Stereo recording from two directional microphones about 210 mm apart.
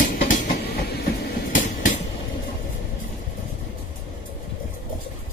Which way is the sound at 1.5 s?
40° left (ahead or behind).